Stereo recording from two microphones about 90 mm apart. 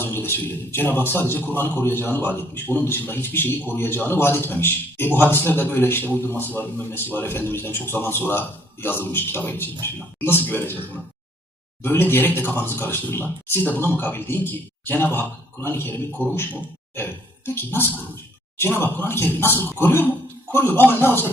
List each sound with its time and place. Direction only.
0.0 s a man's voice: 25° left (ahead or behind)
11.8 s a man's voice: 25° left (ahead or behind)